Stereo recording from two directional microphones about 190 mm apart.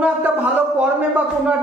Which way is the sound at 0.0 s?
10° right (ahead or behind).